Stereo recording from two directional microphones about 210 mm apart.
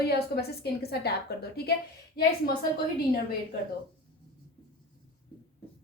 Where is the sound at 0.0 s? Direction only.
50° left (ahead or behind).